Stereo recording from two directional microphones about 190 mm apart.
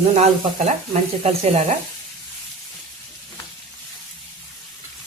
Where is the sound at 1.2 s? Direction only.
30° right (ahead or behind).